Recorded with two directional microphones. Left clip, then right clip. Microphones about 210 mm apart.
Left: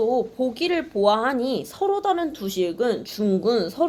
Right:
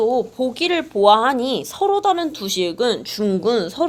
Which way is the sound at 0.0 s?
35° right (ahead or behind).